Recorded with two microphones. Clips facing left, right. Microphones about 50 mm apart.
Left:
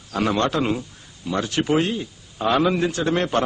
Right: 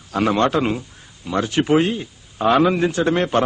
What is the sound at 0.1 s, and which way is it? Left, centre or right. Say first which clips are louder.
A man's voice: right 4 dB; centre.